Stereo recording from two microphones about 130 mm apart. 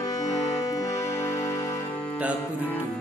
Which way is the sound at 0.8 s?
25° left (ahead or behind).